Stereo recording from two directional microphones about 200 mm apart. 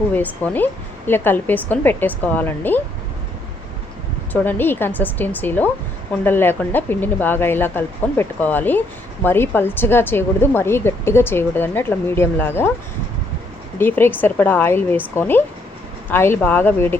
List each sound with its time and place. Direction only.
0.1 s speech: 10° left (ahead or behind)
4.3 s speech: 10° left (ahead or behind)
13.7 s speech: 10° left (ahead or behind)